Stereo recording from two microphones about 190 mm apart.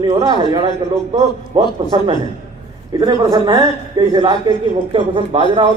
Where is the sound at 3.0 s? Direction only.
20° right (ahead or behind).